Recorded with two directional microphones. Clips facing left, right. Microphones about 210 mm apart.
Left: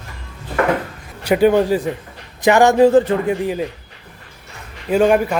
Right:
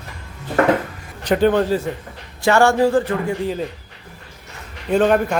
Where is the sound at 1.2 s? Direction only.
10° left (ahead or behind).